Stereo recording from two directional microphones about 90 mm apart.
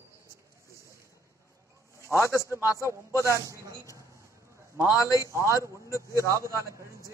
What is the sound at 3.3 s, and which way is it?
Speech, 35° right (ahead or behind).